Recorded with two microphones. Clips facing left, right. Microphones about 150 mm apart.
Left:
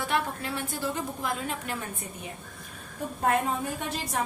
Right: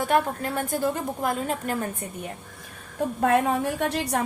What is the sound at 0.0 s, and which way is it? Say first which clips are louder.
A woman's voice: right 6 dB; 45° right (ahead or behind).